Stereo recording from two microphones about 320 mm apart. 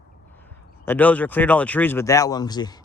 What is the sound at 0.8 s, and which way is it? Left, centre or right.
Speech, centre.